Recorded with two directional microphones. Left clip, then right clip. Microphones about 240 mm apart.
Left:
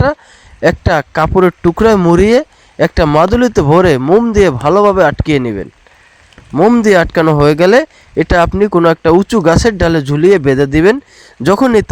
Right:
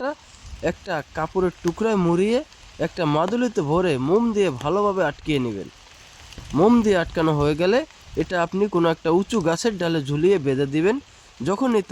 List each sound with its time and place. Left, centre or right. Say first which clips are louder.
0.6 s speech: left 15 dB; left